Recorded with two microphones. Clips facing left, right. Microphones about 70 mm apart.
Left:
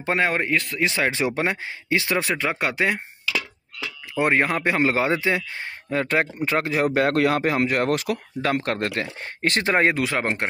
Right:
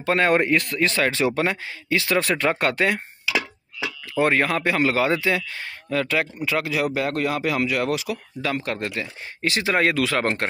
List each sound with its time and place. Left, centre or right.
0.2 s speech: centre
0.8 s speech: centre
2.2 s speech: centre
3.3 s a sound: centre
4.1 s speech: left
6.0 s speech: left
6.9 s speech: left
7.4 s speech: left
9.8 s speech: left